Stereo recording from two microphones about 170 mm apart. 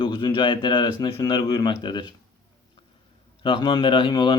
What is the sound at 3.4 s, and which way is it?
Speech, 30° left (ahead or behind).